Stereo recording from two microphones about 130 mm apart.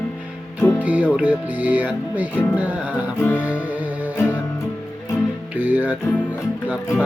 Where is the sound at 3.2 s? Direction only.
15° left (ahead or behind).